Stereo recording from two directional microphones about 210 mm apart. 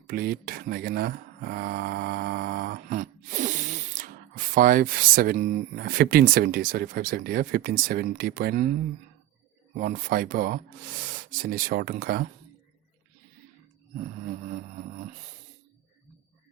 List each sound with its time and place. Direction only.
0.1 s speech: 45° right (ahead or behind)
9.8 s speech: 40° right (ahead or behind)